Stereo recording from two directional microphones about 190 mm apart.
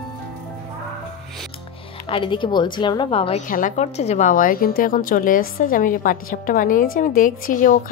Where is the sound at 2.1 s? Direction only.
25° left (ahead or behind).